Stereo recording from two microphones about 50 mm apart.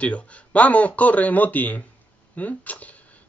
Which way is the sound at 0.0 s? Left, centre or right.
Left.